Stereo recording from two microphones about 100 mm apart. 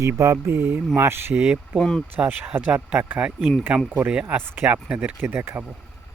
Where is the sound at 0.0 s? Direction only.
30° right (ahead or behind); by 1.6 s 10° right (ahead or behind).